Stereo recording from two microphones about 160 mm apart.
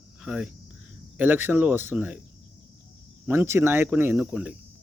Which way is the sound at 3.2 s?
15° right (ahead or behind).